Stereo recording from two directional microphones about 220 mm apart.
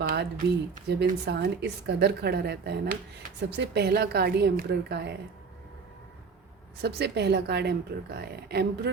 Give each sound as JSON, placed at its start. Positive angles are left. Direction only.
{"t": 0.0, "sound": "a sound", "side_deg": -40}
{"t": 0.9, "sound": "a woman's voice", "side_deg": -50}
{"t": 6.8, "sound": "a woman's voice", "side_deg": -50}